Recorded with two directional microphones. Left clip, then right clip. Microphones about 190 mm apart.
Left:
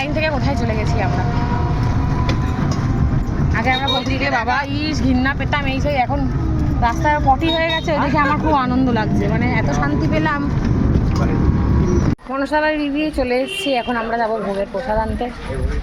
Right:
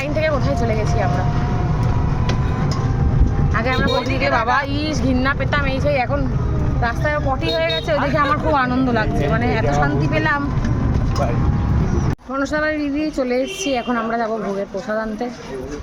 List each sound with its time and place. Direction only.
0.2 s vehicle: 20° right (ahead or behind)
4.2 s a woman's voice: 25° right (ahead or behind)
12.5 s a woman's voice: 20° right (ahead or behind)